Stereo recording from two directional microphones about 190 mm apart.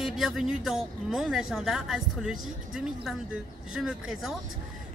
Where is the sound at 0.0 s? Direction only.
Centre (ahead or behind).